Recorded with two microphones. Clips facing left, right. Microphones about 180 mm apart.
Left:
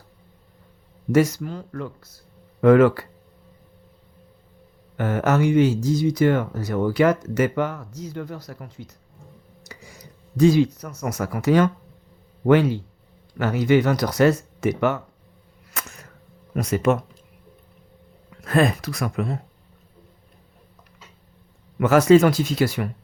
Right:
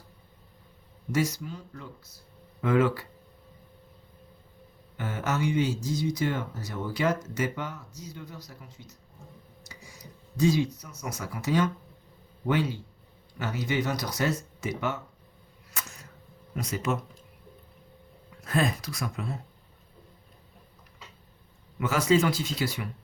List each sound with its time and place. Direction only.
1.1 s speech: 55° left (ahead or behind)
4.9 s speech: 60° left (ahead or behind)
10.3 s speech: 60° left (ahead or behind)
16.6 s speech: 70° left (ahead or behind)
18.4 s speech: 65° left (ahead or behind)
21.8 s a man's voice: 75° left (ahead or behind)
22.2 s speech: 50° left (ahead or behind)
22.4 s speech: 90° left